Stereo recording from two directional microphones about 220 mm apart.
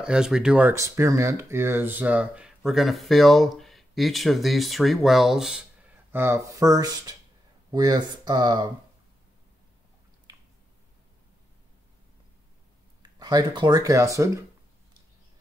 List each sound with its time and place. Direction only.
0.0 s speech: 5° right (ahead or behind); by 8.6 s 20° right (ahead or behind)
13.0 s speech: 20° right (ahead or behind)